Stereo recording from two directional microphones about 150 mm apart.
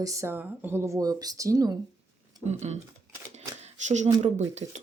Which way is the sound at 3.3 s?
50° right (ahead or behind).